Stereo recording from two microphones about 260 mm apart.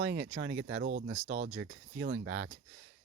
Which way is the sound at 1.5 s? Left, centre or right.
Right.